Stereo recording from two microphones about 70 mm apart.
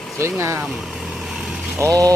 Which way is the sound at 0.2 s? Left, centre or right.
Right.